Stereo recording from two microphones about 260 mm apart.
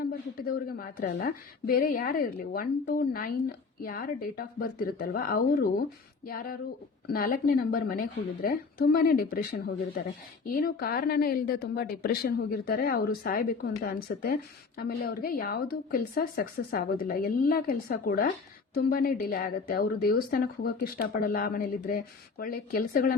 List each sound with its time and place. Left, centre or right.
0.0 s a woman's voice: left